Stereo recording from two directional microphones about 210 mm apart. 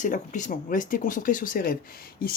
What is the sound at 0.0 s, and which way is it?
Speech, 35° left (ahead or behind).